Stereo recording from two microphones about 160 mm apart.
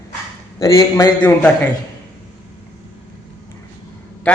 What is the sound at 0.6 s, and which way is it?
Speech, 25° left (ahead or behind).